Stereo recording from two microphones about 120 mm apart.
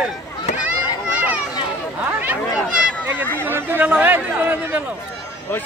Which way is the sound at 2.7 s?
10° right (ahead or behind).